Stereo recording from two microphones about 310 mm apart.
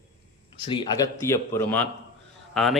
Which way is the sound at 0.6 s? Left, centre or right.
Centre.